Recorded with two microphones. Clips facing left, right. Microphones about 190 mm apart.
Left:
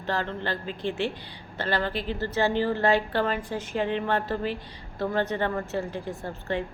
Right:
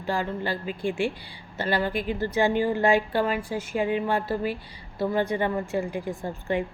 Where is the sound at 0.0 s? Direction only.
10° right (ahead or behind).